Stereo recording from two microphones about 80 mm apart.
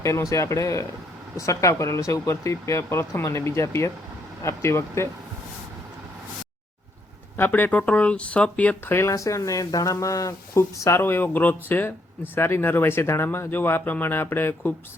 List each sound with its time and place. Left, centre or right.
0.0 s speech: left
7.3 s speech: left
8.9 s speech: left